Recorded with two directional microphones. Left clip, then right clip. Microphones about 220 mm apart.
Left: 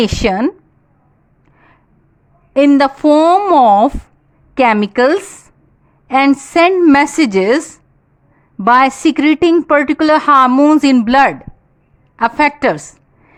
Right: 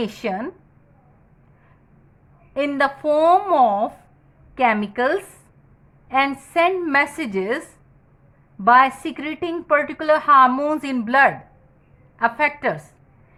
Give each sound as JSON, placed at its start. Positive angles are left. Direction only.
{"t": 0.0, "sound": "a woman's voice", "side_deg": 45}
{"t": 2.5, "sound": "a woman's voice", "side_deg": 50}
{"t": 8.6, "sound": "a woman's voice", "side_deg": 50}